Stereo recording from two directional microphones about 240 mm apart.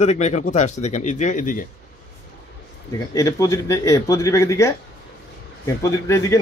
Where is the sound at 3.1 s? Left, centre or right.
Centre.